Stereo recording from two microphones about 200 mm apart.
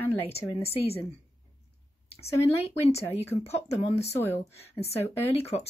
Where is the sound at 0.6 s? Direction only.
30° left (ahead or behind).